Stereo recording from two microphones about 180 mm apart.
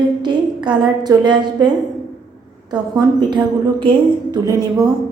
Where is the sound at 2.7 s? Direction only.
25° right (ahead or behind).